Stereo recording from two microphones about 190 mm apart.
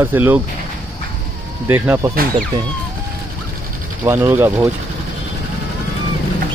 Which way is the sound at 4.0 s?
10° right (ahead or behind).